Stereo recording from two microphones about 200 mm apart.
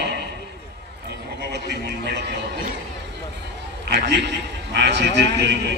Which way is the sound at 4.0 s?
60° right (ahead or behind).